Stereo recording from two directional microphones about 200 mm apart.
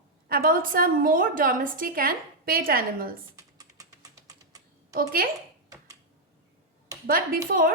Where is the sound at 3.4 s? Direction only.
15° right (ahead or behind).